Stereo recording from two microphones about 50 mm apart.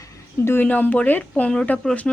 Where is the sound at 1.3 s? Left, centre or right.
Left.